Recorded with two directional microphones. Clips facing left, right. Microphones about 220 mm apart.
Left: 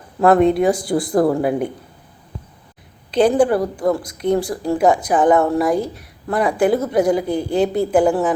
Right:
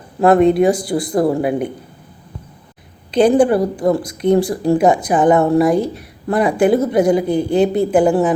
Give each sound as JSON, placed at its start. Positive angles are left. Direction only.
{"t": 0.2, "sound": "a woman's voice", "side_deg": -20}
{"t": 0.7, "sound": "speech", "side_deg": 0}
{"t": 1.1, "sound": "a woman's voice", "side_deg": -25}
{"t": 3.2, "sound": "a woman's voice", "side_deg": -15}